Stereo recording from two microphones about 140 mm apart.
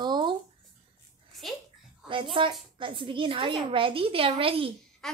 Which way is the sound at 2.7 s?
35° right (ahead or behind).